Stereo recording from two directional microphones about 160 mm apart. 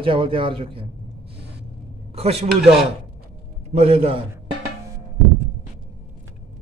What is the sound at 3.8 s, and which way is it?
Speech, 40° right (ahead or behind).